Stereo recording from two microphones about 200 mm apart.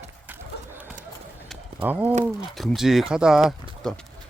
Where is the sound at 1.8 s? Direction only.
10° right (ahead or behind).